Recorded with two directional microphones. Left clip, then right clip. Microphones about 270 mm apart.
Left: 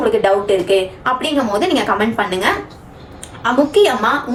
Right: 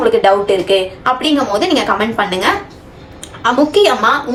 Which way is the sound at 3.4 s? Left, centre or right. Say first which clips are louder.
Right 2 dB; centre.